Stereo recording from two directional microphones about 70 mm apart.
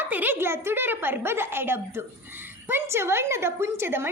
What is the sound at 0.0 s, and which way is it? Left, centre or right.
A woman's voice, right.